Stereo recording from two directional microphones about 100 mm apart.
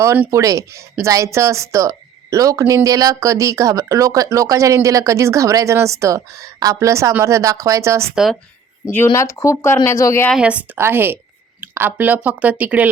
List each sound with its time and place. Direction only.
0.3 s speech: 35° right (ahead or behind)
8.1 s speech: 5° right (ahead or behind)
9.1 s speech: 30° left (ahead or behind)
10.3 s speech: 10° right (ahead or behind)
10.8 s a woman's voice: 25° right (ahead or behind)